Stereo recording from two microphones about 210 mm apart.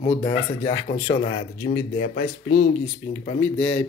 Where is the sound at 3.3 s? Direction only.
60° left (ahead or behind).